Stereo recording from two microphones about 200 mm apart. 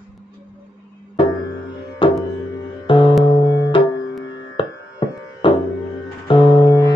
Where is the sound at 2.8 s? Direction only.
25° left (ahead or behind).